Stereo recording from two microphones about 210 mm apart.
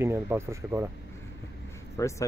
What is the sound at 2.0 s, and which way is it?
Speech, 15° left (ahead or behind).